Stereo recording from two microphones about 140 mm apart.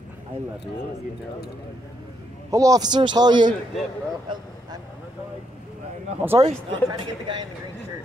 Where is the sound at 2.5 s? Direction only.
25° right (ahead or behind).